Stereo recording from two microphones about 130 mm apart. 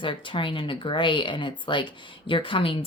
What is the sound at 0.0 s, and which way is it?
Speech, 40° left (ahead or behind).